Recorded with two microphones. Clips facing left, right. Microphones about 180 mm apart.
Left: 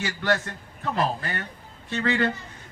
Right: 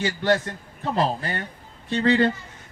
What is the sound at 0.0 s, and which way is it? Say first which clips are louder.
A man's voice: right 4 dB; 25° right (ahead or behind).